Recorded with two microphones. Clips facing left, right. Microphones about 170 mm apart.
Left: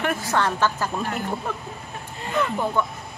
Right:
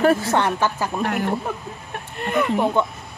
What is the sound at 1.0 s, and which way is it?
Speech, 65° right (ahead or behind).